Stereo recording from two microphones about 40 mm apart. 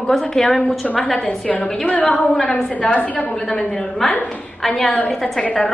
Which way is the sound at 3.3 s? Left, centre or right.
Centre.